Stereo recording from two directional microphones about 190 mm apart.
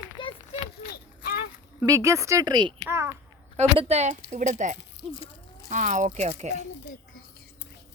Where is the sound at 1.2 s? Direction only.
50° left (ahead or behind).